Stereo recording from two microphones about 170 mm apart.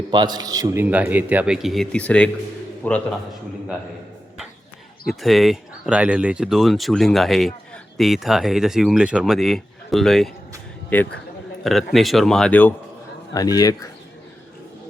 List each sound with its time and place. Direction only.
0.1 s a man's voice: 25° right (ahead or behind); by 3.0 s 10° left (ahead or behind)
5.0 s speech: centre (ahead or behind)
13.3 s a man's voice: 20° left (ahead or behind)